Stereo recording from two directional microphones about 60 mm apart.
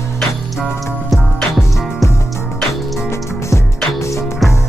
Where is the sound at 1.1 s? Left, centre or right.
Centre.